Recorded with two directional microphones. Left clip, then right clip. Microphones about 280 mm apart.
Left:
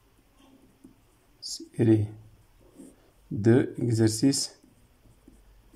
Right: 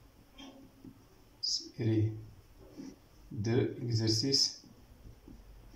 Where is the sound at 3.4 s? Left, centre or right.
Left.